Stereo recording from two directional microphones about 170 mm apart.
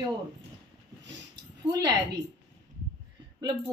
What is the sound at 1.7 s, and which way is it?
Speech, 25° right (ahead or behind).